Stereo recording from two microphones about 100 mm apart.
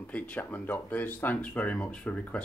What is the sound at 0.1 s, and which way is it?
Speech, 15° left (ahead or behind).